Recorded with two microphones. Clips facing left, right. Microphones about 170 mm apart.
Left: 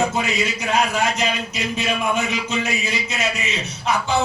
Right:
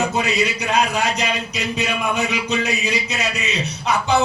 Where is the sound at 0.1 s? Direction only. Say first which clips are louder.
Right 2 dB; 20° right (ahead or behind).